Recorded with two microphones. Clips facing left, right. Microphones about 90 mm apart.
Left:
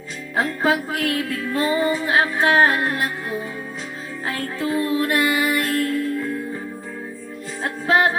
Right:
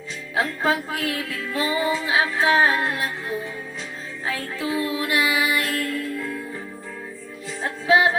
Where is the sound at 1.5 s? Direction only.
40° left (ahead or behind).